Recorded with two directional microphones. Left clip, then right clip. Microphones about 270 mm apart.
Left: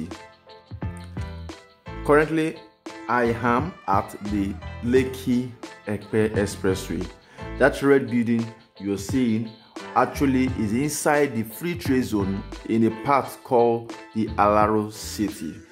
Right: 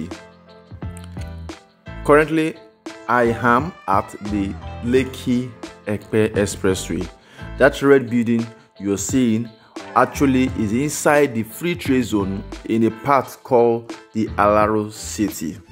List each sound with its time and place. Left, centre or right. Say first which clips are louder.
2.0 s speech: right 4 dB; centre
4.1 s speech: right 3 dB; centre